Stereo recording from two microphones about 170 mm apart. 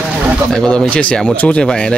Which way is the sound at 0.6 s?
5° left (ahead or behind).